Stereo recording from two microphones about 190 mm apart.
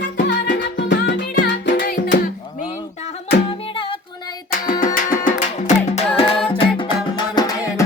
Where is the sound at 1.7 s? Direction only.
45° left (ahead or behind).